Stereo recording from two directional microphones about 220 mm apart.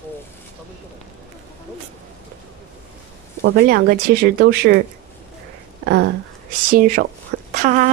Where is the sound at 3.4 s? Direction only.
45° right (ahead or behind).